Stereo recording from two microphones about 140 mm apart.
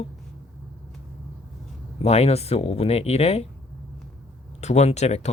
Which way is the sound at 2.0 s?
50° left (ahead or behind).